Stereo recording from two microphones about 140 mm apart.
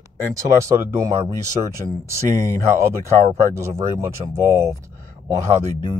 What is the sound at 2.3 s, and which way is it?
Speech, 20° left (ahead or behind).